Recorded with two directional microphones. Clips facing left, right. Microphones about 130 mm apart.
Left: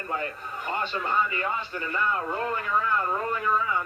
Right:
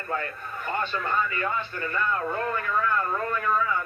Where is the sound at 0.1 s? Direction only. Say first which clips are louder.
Right 1 dB; 20° left (ahead or behind).